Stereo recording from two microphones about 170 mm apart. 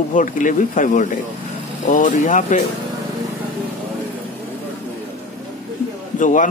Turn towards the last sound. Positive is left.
turn(degrees=50)  # may be behind; listen again after turning